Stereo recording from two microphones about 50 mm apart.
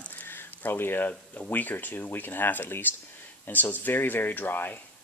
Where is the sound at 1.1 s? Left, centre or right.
Left.